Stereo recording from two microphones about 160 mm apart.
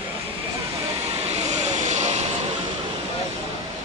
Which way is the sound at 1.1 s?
40° right (ahead or behind).